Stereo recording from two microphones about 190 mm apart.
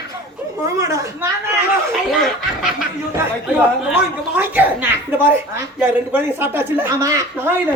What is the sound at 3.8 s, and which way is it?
Speech, 10° right (ahead or behind).